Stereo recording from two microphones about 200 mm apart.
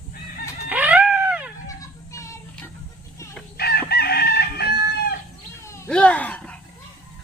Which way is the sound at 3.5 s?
50° left (ahead or behind).